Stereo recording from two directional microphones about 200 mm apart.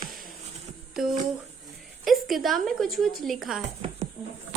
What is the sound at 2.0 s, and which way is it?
A woman's voice, centre (ahead or behind).